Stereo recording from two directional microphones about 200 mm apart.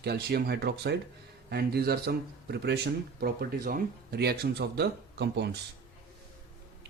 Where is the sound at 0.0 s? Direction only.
50° right (ahead or behind).